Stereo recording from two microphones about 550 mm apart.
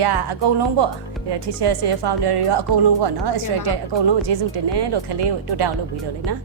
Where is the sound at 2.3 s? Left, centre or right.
Right.